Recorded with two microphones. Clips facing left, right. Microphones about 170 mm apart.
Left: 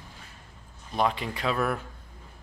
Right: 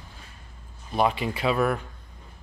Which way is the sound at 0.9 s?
5° right (ahead or behind).